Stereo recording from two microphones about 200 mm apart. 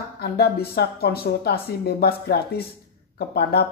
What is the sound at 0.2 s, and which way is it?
Speech, 55° left (ahead or behind).